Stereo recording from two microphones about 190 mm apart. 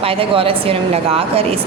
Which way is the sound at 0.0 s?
30° right (ahead or behind).